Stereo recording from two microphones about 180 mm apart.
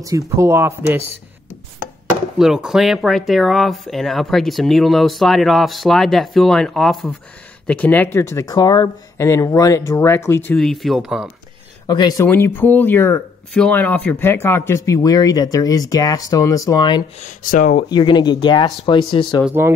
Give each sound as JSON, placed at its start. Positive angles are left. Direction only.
{"t": 0.4, "sound": "speech", "side_deg": -15}
{"t": 2.3, "sound": "speech", "side_deg": 0}
{"t": 10.5, "sound": "speech", "side_deg": 0}
{"t": 11.9, "sound": "speech", "side_deg": 20}
{"t": 17.4, "sound": "speech", "side_deg": 50}
{"t": 17.8, "sound": "speech", "side_deg": 25}
{"t": 19.4, "sound": "speech", "side_deg": -10}